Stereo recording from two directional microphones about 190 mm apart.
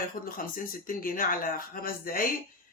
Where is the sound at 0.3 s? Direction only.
45° left (ahead or behind).